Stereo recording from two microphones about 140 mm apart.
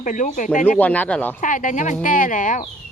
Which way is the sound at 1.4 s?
65° left (ahead or behind).